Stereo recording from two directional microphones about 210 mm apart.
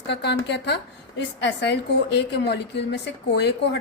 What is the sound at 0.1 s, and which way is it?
A woman's voice, 55° left (ahead or behind).